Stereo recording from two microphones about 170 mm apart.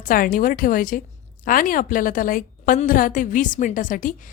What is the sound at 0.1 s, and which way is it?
A woman's voice, 55° left (ahead or behind).